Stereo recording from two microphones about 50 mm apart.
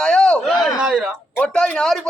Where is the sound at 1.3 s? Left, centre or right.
Centre.